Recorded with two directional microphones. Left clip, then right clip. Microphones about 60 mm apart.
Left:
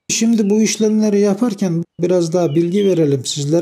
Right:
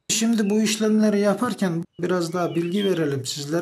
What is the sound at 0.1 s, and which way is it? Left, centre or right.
Speech, left.